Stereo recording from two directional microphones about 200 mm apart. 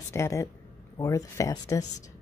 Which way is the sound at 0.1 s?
15° left (ahead or behind).